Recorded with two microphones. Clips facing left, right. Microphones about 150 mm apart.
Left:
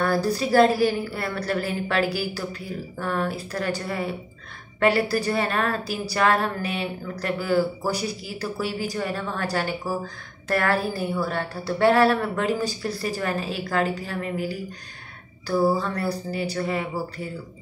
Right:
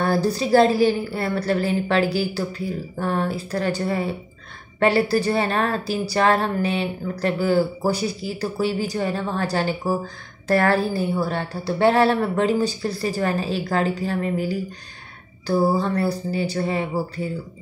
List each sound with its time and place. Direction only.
0.0 s a woman's voice: 25° right (ahead or behind)